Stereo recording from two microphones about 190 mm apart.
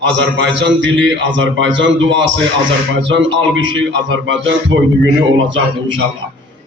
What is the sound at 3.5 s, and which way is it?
A man's voice, 80° right.